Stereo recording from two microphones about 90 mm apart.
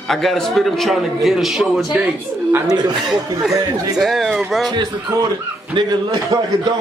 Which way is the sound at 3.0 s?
5° right (ahead or behind).